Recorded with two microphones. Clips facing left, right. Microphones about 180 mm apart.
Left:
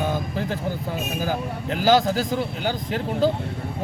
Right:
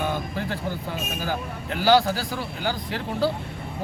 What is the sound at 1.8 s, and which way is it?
Speech, 20° left (ahead or behind).